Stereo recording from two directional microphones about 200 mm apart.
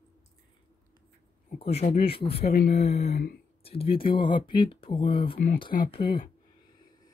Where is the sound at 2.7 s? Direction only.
35° left (ahead or behind).